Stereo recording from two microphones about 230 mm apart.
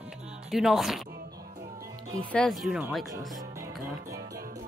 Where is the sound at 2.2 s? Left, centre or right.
Centre.